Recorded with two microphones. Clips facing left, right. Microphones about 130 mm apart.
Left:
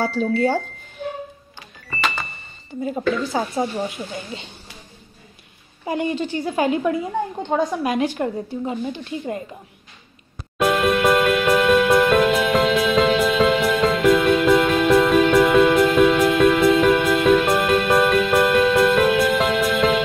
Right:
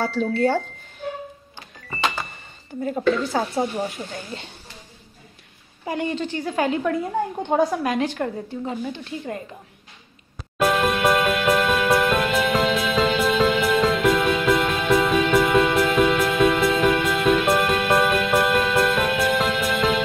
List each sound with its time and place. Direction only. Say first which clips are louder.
0.3 s speech: even; 10° left (ahead or behind)
2.8 s a woman's voice: right 1 dB; 10° left (ahead or behind)
5.9 s speech: left 2 dB; 15° left (ahead or behind)
7.1 s a woman's voice: even; 5° right (ahead or behind)
7.8 s speech: left 2 dB; 15° left (ahead or behind)
10.6 s music: left 2 dB; centre (ahead or behind)